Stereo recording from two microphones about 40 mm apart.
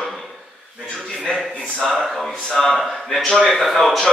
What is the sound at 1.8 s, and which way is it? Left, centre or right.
Speech, centre.